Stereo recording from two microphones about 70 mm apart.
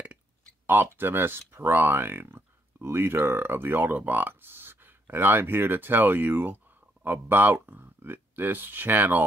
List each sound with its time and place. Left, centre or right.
0.7 s speech: right